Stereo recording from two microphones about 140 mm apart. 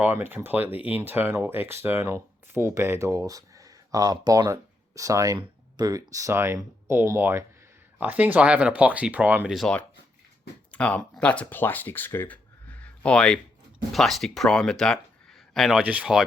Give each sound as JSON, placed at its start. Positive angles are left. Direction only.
{"t": 0.0, "sound": "speech", "side_deg": -15}
{"t": 9.6, "sound": "speech", "side_deg": 5}